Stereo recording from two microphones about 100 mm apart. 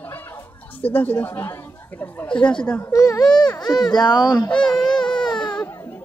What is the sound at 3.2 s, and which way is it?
Speech, 45° left (ahead or behind).